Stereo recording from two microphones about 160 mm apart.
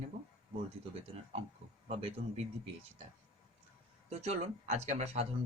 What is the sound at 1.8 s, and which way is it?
Speech, 40° right (ahead or behind).